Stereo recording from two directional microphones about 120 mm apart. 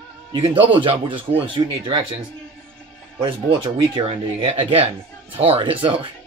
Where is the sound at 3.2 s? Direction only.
40° right (ahead or behind).